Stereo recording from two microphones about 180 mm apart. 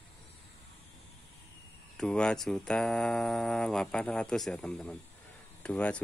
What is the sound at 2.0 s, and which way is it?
Speech, 5° left (ahead or behind).